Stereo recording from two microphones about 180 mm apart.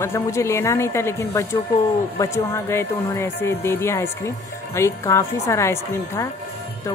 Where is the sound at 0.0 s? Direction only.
15° left (ahead or behind).